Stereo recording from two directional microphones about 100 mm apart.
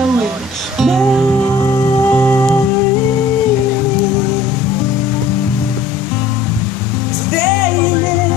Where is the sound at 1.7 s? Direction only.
25° left (ahead or behind).